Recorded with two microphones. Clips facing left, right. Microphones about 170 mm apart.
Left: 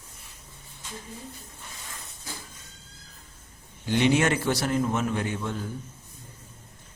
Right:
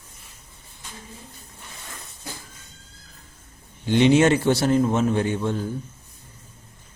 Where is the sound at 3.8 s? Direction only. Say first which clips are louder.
Right 6 dB; 25° right (ahead or behind).